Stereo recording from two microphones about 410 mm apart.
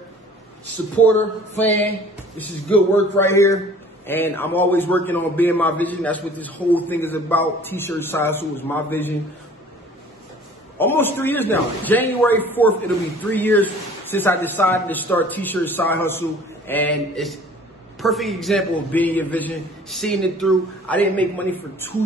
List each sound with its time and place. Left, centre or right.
1.6 s a man's voice: centre
10.8 s a man's voice: centre